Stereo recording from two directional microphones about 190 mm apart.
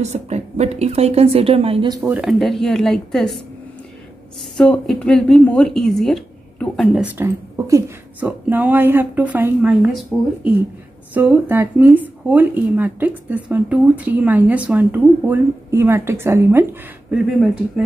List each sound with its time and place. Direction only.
0.0 s a woman's voice: 35° right (ahead or behind)
2.0 s speech: 5° right (ahead or behind)
4.6 s speech: 5° left (ahead or behind); by 16.6 s 15° right (ahead or behind)
17.1 s speech: centre (ahead or behind)